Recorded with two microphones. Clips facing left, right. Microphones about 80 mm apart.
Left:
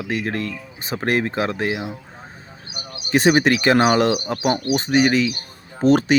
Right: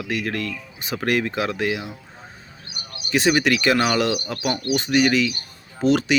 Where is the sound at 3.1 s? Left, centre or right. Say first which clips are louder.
Left 3 dB; left.